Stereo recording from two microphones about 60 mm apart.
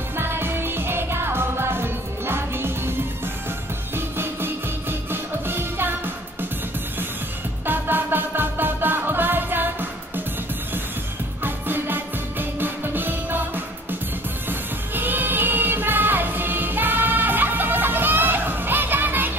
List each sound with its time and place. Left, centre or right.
0.2 s music: right
3.9 s music: right
7.6 s music: right
11.4 s music: right
14.5 s music: right